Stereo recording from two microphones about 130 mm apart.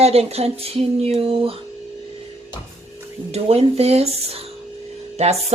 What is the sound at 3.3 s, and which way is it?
A woman's voice, 50° right (ahead or behind).